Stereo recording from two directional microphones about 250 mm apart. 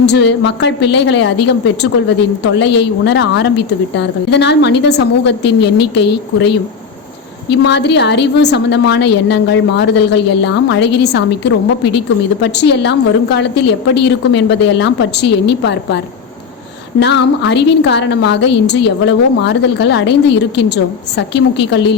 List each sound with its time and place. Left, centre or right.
0.0 s a woman's voice: left
17.0 s a woman's voice: left